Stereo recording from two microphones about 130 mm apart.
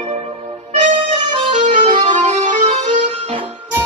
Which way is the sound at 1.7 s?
65° right (ahead or behind).